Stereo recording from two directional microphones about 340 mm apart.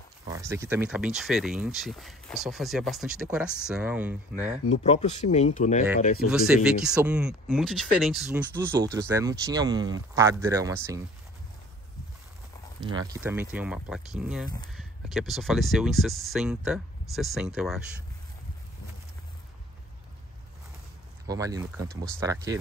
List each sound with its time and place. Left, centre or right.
0.3 s speech: centre
4.8 s speech: centre
6.3 s speech: centre
12.8 s speech: centre
21.3 s speech: centre